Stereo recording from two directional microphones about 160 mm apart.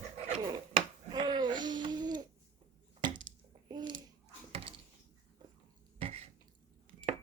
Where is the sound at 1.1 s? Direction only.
30° right (ahead or behind).